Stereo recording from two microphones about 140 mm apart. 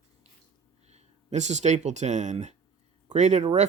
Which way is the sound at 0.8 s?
50° right (ahead or behind).